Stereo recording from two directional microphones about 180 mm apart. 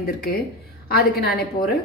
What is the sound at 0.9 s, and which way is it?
Speech, 60° left (ahead or behind).